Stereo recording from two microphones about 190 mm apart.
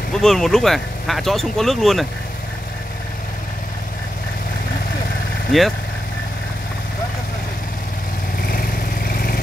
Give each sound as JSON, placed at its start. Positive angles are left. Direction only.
{"t": 0.1, "sound": "speech", "side_deg": 0}
{"t": 5.5, "sound": "speech", "side_deg": 0}
{"t": 8.5, "sound": "vehicle", "side_deg": 50}